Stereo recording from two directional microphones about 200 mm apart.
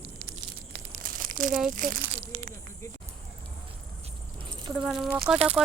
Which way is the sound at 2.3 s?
35° right (ahead or behind).